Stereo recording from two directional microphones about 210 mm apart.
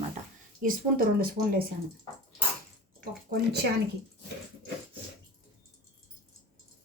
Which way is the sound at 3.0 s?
50° right (ahead or behind).